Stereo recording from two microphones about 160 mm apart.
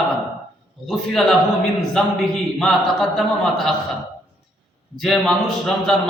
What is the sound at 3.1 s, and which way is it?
Speech, centre (ahead or behind).